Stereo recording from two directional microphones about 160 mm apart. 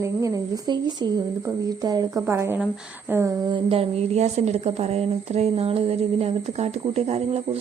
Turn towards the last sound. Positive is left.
turn(degrees=-40)  # may be behind; listen again after turning